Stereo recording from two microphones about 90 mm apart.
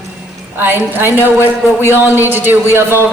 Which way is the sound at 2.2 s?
20° right (ahead or behind).